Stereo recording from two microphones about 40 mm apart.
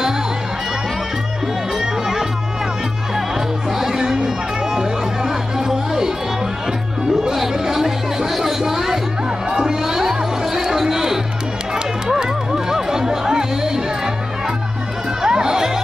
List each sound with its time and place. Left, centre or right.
1.8 s music: centre
3.7 s music: centre
7.2 s chatter: centre
9.5 s music: centre
15.2 s music: centre